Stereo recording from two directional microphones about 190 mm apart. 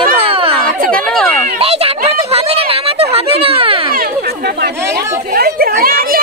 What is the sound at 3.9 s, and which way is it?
Chatter, 50° right (ahead or behind).